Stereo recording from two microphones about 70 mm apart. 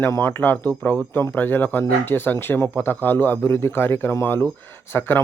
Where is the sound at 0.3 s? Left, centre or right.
Left.